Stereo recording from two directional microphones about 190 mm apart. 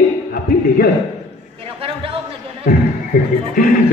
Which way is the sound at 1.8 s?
30° right (ahead or behind).